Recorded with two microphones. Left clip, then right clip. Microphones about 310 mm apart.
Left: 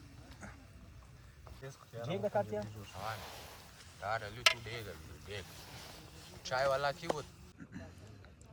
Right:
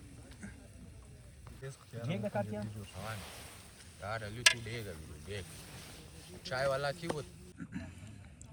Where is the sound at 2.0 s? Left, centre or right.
Left.